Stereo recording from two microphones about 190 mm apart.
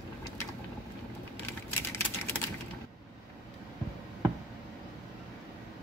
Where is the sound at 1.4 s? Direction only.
10° left (ahead or behind).